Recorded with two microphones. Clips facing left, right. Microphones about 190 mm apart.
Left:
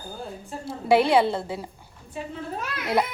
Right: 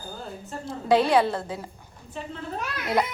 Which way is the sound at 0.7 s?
10° left (ahead or behind).